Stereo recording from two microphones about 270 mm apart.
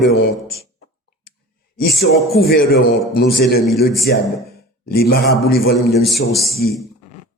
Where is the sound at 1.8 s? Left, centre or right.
Left.